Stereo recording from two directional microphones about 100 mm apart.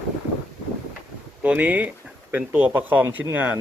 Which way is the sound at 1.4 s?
15° right (ahead or behind).